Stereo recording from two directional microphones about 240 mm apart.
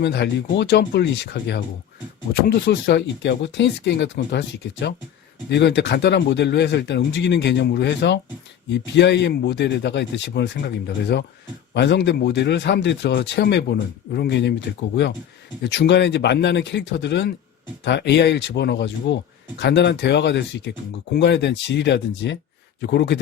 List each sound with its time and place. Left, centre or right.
0.0 s a man's voice: left
15.6 s a man's voice: left